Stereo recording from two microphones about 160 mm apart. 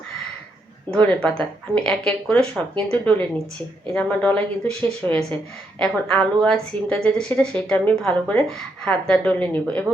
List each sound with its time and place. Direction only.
1.7 s a woman's voice: 5° left (ahead or behind)